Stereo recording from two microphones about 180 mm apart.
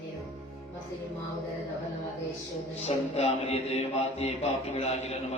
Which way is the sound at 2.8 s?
35° left (ahead or behind).